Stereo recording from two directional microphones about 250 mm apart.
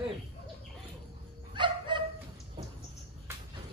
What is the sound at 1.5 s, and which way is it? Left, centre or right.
Dog, centre.